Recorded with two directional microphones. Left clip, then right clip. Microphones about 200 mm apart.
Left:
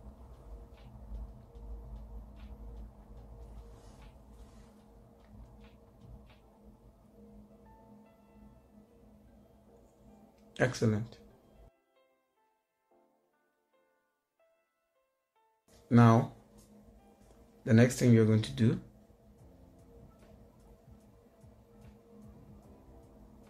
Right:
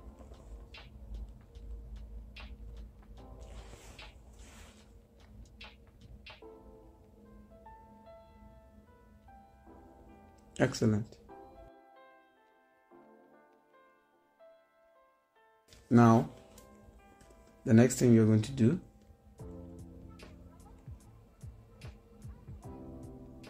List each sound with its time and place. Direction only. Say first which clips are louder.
0.8 s a sound: left 2 dB; centre (ahead or behind)
5.6 s music: right 6 dB; centre (ahead or behind)
10.5 s speech: even; 30° right (ahead or behind)
15.9 s speech: right 1 dB; 30° right (ahead or behind)
17.6 s speech: right 1 dB; 30° right (ahead or behind)